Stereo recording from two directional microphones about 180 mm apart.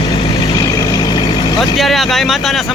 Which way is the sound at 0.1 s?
20° left (ahead or behind).